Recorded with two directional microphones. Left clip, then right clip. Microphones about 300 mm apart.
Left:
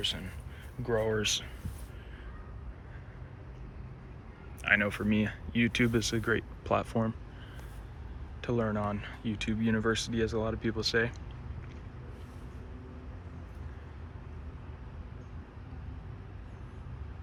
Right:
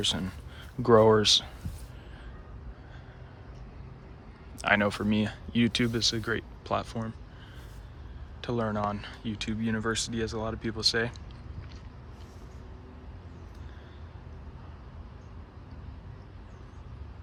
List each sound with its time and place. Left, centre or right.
0.0 s speech: centre
4.5 s speech: centre
8.4 s speech: centre